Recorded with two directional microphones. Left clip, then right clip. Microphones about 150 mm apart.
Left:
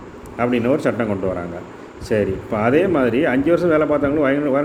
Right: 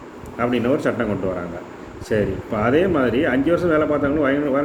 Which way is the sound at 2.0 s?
55° left (ahead or behind).